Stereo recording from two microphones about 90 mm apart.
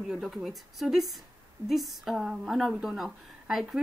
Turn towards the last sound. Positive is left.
turn(degrees=-5)  # may be behind; listen again after turning